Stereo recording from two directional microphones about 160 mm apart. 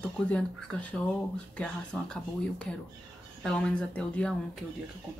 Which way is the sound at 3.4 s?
5° left (ahead or behind).